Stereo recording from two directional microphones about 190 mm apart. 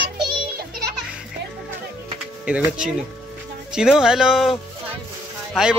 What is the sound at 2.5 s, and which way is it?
Speech, 5° right (ahead or behind).